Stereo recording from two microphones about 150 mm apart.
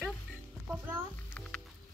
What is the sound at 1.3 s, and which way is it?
Music, 10° left (ahead or behind).